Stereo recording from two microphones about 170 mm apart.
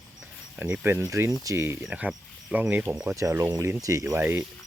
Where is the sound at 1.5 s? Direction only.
15° right (ahead or behind).